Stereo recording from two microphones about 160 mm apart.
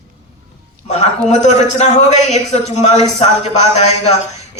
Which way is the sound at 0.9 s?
45° left (ahead or behind).